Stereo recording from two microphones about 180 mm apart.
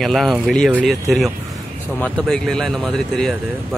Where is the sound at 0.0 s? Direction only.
Centre (ahead or behind).